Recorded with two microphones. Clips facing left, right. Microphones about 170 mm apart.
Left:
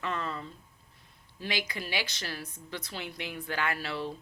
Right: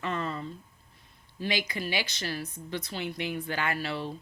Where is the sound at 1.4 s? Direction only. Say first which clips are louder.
Right 4 dB; centre (ahead or behind).